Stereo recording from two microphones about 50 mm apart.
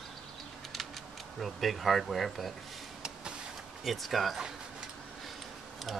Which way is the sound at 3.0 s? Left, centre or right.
Centre.